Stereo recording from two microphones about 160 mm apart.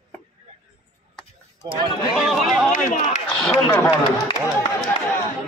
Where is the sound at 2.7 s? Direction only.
50° left (ahead or behind).